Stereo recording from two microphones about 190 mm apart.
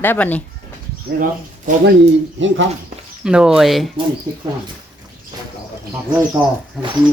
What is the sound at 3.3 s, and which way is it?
Speech, 5° right (ahead or behind).